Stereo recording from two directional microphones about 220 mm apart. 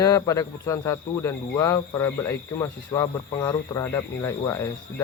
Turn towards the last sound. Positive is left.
turn(degrees=15)  # may be behind; listen again after turning